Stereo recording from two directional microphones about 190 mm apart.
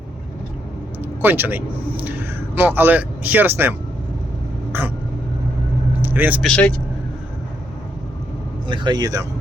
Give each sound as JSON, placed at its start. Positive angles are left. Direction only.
{"t": 1.2, "sound": "speech", "side_deg": -10}
{"t": 6.0, "sound": "vehicle", "side_deg": -10}
{"t": 6.4, "sound": "speech", "side_deg": 5}
{"t": 8.6, "sound": "speech", "side_deg": -25}